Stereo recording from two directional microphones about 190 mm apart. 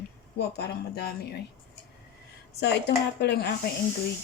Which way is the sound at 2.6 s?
60° left (ahead or behind).